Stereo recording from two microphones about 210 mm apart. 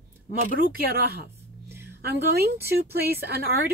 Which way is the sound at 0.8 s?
45° right (ahead or behind).